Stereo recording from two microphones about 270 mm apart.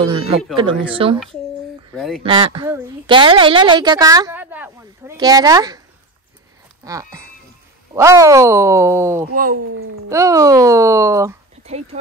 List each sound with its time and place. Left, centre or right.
0.0 s speech: right
2.0 s speech: centre
2.2 s a woman's voice: centre
6.8 s a woman's voice: centre
9.3 s speech: right
10.0 s a woman's voice: centre
11.6 s speech: right